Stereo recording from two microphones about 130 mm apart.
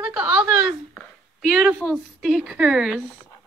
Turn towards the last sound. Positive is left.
turn(degrees=-5)  # may be behind; listen again after turning